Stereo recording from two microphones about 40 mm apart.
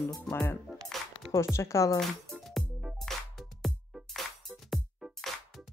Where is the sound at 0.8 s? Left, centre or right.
Centre.